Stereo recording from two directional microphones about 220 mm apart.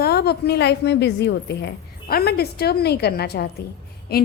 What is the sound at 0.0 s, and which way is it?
A woman's voice, 45° left (ahead or behind).